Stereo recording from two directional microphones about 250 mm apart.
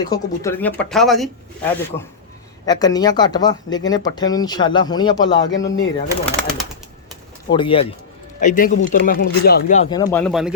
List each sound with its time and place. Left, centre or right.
0.0 s speech: centre
2.6 s speech: centre
5.4 s speech: left
6.2 s speech: centre
7.5 s speech: left
9.9 s speech: centre